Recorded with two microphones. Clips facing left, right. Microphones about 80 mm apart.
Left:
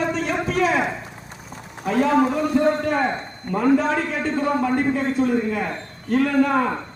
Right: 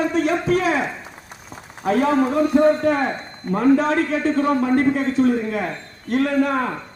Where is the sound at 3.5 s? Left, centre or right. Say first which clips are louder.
Right 2 dB; right.